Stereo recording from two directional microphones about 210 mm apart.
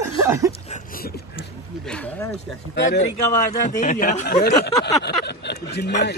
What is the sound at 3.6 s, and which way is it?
Speech, 35° left (ahead or behind).